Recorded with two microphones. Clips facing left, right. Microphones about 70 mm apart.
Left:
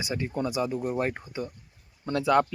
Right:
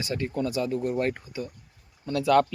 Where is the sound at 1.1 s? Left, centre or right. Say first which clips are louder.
Left 1 dB; left.